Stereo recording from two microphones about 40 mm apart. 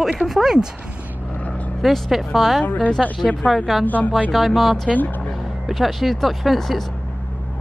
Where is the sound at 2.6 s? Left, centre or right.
Left.